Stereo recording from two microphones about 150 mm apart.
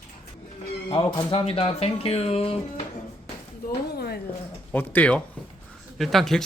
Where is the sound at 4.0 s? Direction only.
90° left.